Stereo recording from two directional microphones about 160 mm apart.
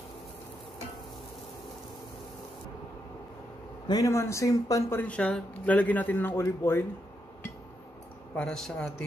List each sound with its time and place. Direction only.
3.8 s speech: 25° left (ahead or behind)
8.4 s a man's voice: 5° left (ahead or behind)